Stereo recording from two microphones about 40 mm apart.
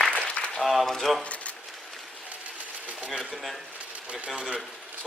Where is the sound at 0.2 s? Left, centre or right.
Left.